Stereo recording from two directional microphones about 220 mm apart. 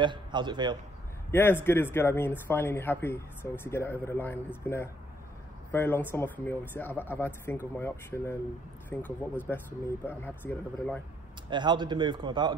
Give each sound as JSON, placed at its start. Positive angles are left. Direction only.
{"t": 0.0, "sound": "a man's voice", "side_deg": -20}
{"t": 1.3, "sound": "speech", "side_deg": 10}
{"t": 5.7, "sound": "speech", "side_deg": 10}
{"t": 11.5, "sound": "a man's voice", "side_deg": -20}